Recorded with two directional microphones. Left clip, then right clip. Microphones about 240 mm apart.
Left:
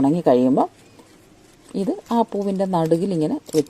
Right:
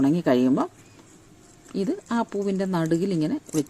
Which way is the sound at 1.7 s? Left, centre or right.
Centre.